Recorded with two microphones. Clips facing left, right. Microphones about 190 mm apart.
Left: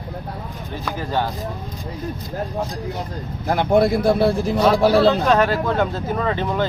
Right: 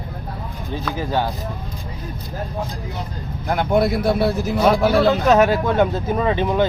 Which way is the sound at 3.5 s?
30° left (ahead or behind).